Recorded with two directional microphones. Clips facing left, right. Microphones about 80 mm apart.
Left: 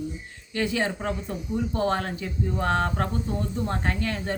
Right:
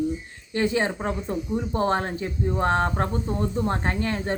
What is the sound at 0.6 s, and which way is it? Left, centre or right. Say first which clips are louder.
A woman's voice: right 3 dB; right.